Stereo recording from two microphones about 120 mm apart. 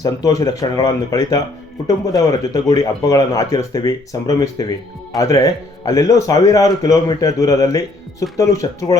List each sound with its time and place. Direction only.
0.0 s a man's voice: 30° left (ahead or behind)